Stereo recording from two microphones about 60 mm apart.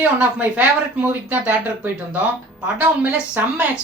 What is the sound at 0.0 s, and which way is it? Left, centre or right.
Speech, right.